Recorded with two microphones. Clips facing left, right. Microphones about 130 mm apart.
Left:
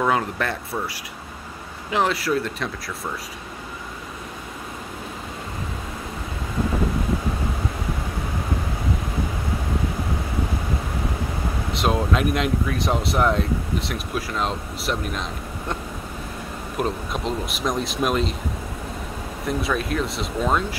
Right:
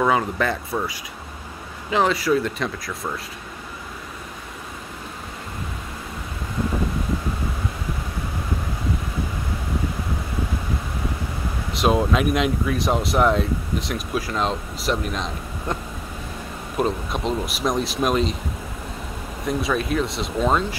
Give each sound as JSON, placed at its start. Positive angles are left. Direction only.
{"t": 0.0, "sound": "speech", "side_deg": 0}
{"t": 11.7, "sound": "speech", "side_deg": 0}
{"t": 19.4, "sound": "speech", "side_deg": 0}